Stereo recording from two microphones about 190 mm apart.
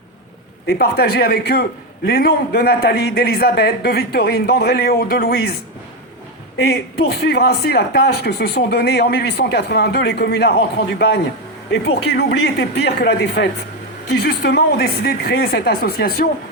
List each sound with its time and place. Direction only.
0.7 s speech: 55° left (ahead or behind)
6.6 s speech: 60° left (ahead or behind)